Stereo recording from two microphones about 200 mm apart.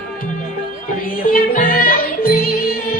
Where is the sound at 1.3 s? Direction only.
45° left (ahead or behind).